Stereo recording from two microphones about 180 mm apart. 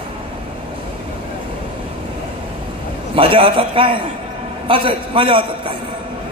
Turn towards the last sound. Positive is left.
turn(degrees=-30)  # may be behind; listen again after turning